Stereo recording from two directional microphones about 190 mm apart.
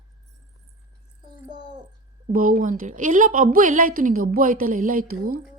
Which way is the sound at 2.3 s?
45° right (ahead or behind).